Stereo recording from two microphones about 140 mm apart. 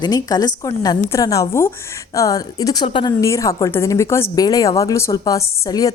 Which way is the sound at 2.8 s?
35° left (ahead or behind).